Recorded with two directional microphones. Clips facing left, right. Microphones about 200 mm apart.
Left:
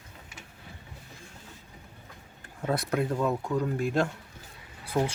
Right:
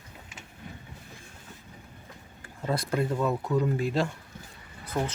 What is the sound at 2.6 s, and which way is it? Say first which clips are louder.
Speech: even; centre (ahead or behind).